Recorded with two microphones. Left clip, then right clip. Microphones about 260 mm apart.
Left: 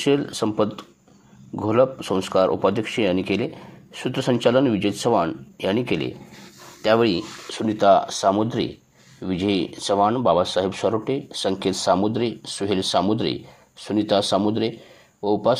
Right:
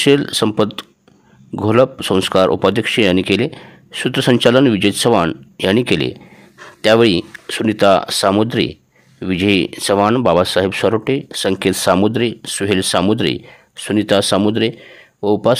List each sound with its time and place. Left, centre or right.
0.0 s speech: right